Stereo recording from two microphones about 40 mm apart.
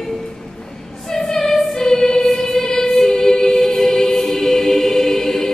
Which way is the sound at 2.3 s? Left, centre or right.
Centre.